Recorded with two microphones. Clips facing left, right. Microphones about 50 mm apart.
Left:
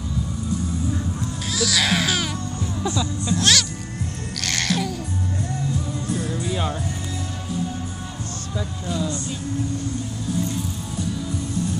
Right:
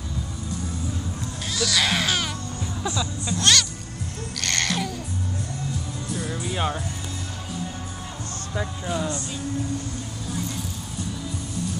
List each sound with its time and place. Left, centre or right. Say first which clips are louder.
1.5 s baby cry: left 2 dB; centre
3.0 s speech: left 4 dB; centre
4.4 s babbling: left 2 dB; centre
6.3 s music: left 1 dB; centre
8.8 s speech: left 2 dB; right